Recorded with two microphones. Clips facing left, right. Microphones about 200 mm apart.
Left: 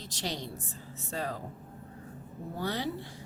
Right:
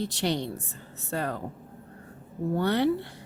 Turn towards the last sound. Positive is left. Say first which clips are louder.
# right 9 dB
turn(degrees=-65)  # may be behind; listen again after turning